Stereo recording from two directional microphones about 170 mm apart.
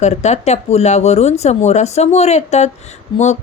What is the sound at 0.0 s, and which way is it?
Speech, 40° left (ahead or behind).